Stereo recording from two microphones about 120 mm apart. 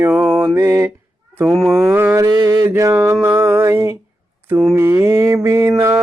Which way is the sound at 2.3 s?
30° right (ahead or behind).